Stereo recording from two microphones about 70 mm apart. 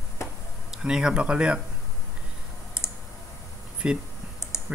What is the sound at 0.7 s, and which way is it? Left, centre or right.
Speech, centre.